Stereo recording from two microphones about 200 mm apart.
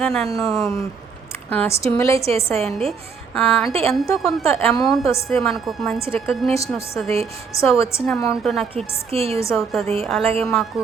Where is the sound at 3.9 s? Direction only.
Centre (ahead or behind).